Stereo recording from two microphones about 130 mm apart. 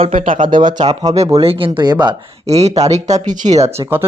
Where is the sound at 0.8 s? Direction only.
30° right (ahead or behind).